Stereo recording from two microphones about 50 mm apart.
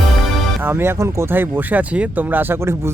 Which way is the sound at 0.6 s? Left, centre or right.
Right.